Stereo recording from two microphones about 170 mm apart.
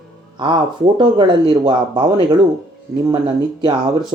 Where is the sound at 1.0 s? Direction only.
30° right (ahead or behind).